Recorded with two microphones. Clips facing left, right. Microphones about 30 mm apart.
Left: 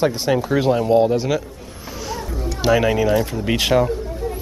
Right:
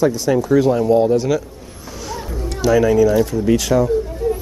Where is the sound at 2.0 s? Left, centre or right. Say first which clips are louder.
Right 1 dB; centre.